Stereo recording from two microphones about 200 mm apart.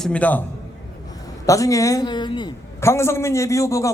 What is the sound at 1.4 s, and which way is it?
A man's voice, 15° left (ahead or behind).